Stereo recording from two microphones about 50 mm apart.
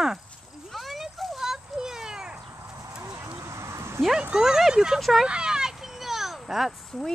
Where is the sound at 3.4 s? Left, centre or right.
Right.